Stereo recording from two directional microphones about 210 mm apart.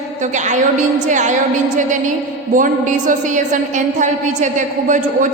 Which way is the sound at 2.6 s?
40° right (ahead or behind).